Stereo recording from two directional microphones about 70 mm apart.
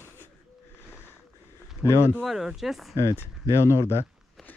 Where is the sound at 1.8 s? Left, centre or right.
Left.